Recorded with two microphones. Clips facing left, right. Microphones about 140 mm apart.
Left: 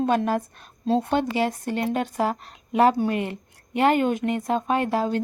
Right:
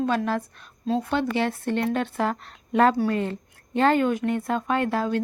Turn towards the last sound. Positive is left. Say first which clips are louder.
# left 1 dB
turn(degrees=20)  # may be behind; listen again after turning